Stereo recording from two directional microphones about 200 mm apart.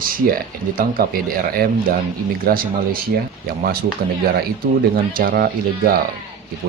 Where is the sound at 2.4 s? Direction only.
45° right (ahead or behind).